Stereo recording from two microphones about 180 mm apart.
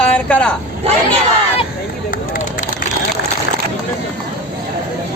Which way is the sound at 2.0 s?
50° left (ahead or behind).